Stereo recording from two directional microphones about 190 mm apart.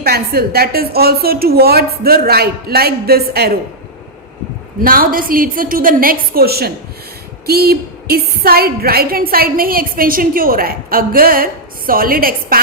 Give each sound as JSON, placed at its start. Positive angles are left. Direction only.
{"t": 0.0, "sound": "a woman's voice", "side_deg": -55}
{"t": 4.8, "sound": "a woman's voice", "side_deg": -50}